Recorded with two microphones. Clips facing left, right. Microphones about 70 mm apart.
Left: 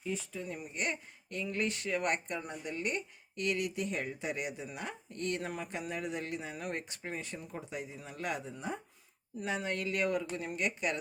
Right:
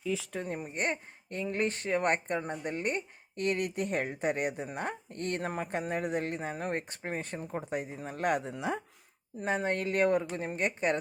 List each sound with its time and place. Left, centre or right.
0.3 s speech: right
8.5 s speech: right
9.4 s speech: right